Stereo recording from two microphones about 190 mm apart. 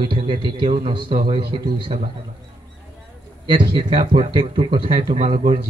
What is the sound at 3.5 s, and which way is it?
A man's voice, 25° right (ahead or behind).